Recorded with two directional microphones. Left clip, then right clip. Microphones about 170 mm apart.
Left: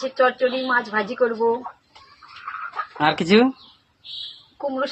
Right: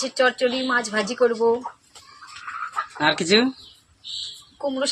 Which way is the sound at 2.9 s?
20° left (ahead or behind).